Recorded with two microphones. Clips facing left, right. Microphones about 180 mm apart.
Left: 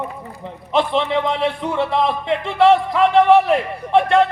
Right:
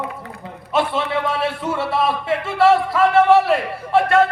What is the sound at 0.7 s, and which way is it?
A man's voice, 20° left (ahead or behind).